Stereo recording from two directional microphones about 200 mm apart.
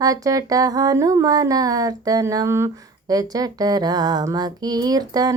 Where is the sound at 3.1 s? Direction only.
20° right (ahead or behind).